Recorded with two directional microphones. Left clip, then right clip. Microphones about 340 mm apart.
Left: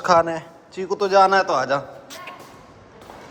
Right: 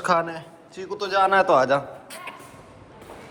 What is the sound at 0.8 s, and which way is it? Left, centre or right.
Speech, left.